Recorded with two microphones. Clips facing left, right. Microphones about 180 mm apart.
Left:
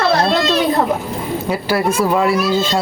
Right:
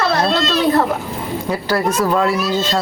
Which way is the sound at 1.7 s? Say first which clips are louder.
Left 1 dB; 10° left (ahead or behind).